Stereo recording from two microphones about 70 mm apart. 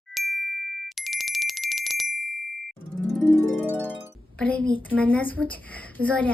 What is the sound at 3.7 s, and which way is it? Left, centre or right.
Music, centre.